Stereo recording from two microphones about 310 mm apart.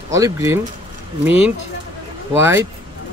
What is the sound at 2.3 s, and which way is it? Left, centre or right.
Speech, centre.